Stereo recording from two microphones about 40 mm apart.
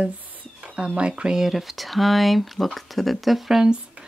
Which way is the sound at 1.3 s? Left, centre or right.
Centre.